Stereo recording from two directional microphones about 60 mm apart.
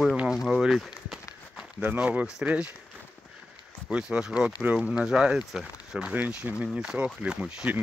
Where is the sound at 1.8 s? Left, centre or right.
Right.